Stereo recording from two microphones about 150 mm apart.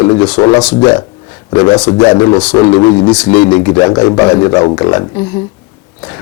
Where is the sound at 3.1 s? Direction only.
10° left (ahead or behind).